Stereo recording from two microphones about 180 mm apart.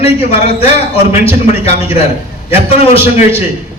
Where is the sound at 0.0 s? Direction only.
35° left (ahead or behind).